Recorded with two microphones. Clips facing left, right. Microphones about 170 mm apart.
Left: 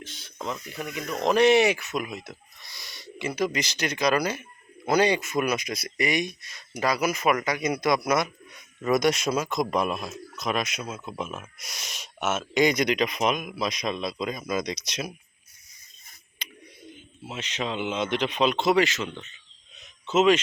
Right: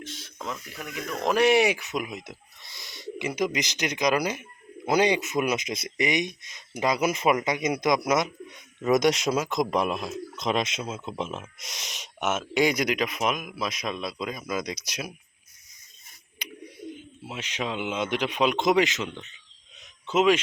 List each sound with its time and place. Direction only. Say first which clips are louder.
0.0 s speech: left 1 dB; centre (ahead or behind)
10.3 s speech: right 1 dB; 25° right (ahead or behind); by 15.1 s 10° right (ahead or behind)
16.4 s bird: right 4 dB; 15° right (ahead or behind)
16.9 s speech: right 1 dB; 10° right (ahead or behind)
19.8 s a sound: left 1 dB; 10° right (ahead or behind)